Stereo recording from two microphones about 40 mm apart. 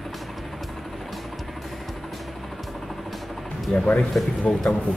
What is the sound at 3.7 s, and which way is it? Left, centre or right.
Music, left.